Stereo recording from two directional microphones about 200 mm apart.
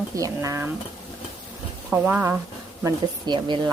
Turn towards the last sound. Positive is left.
turn(degrees=-20)  # may be behind; listen again after turning